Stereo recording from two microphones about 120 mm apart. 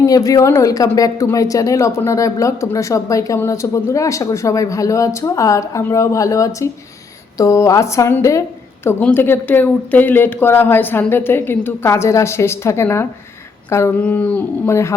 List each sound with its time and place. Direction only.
0.0 s a woman's voice: 30° left (ahead or behind)
13.7 s a sound: 25° left (ahead or behind)
14.0 s speech: 10° left (ahead or behind)